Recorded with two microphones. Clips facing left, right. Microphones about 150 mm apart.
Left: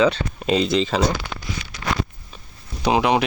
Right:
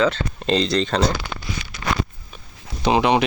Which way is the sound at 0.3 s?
5° left (ahead or behind).